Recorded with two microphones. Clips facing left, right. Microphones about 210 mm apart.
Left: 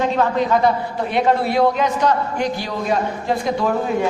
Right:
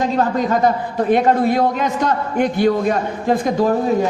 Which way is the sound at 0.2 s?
45° right (ahead or behind).